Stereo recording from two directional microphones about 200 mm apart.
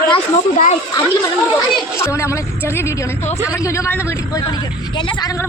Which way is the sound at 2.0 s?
15° left (ahead or behind).